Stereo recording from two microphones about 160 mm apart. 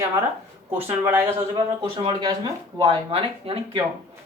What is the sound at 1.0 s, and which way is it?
Speech, 15° right (ahead or behind).